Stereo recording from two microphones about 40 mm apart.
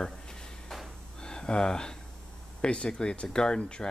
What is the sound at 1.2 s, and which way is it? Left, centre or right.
Speech, centre.